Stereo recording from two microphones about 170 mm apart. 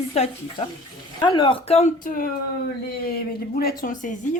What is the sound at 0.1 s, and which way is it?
Speech, 35° left (ahead or behind).